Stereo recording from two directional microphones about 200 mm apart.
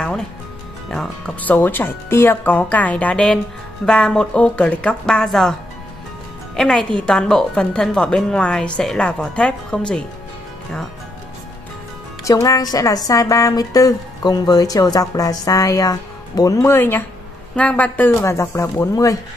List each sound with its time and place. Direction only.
0.8 s a woman's voice: centre (ahead or behind)
12.3 s a woman's voice: 15° left (ahead or behind)